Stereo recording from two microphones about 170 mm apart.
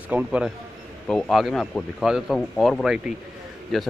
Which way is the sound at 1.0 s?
5° left (ahead or behind).